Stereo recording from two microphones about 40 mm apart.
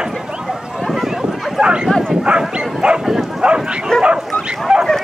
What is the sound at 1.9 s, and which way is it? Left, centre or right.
Bow-wow, centre.